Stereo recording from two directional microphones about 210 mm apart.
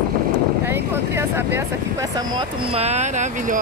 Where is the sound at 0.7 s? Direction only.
10° right (ahead or behind).